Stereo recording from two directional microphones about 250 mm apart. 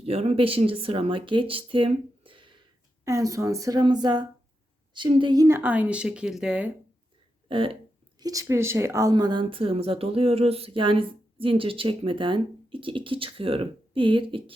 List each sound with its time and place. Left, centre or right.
0.0 s speech: right; by 6.7 s centre
7.4 s speech: right